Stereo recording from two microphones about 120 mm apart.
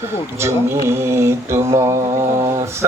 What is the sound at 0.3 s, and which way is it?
Mantra, 20° right (ahead or behind).